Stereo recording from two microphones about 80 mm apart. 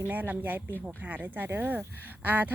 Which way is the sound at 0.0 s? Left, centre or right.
Right.